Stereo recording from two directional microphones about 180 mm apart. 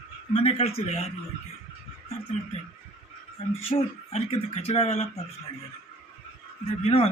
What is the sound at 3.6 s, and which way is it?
Speech, 30° left (ahead or behind).